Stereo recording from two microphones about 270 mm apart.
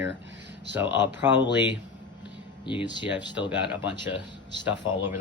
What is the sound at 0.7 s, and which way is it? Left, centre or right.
Speech, centre.